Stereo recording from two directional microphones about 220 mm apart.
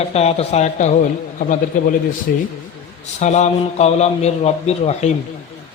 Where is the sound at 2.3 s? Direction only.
40° left (ahead or behind).